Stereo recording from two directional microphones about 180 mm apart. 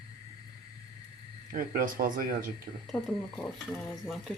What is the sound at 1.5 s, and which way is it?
Speech, 50° right (ahead or behind).